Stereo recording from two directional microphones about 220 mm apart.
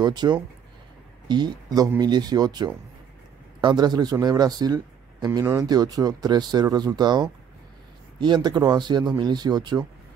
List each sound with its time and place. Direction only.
0.0 s speech: 20° right (ahead or behind)